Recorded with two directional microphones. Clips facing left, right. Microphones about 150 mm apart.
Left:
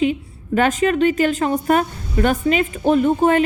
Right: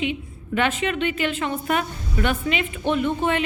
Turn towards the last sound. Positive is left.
turn(degrees=40)  # may be behind; listen again after turning